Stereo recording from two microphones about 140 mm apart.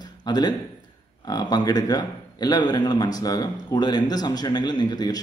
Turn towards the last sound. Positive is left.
turn(degrees=30)  # may be behind; listen again after turning